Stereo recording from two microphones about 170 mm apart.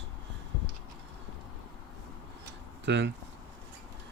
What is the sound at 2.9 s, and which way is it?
Speech, 90° right.